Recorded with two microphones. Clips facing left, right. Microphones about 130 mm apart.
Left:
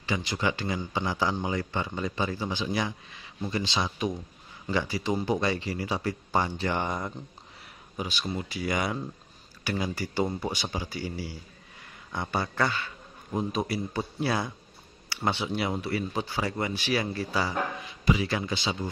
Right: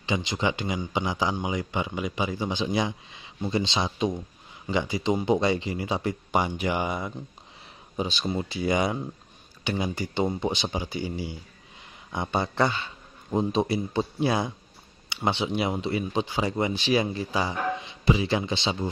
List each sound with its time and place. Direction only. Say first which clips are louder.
0.0 s speech: right 2 dB; 20° right (ahead or behind)
8.0 s speech: right 4 dB; 25° right (ahead or behind)